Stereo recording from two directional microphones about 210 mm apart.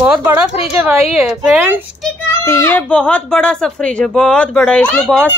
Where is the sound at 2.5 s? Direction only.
10° left (ahead or behind).